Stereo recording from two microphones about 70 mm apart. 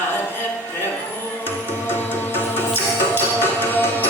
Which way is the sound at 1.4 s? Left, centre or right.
Left.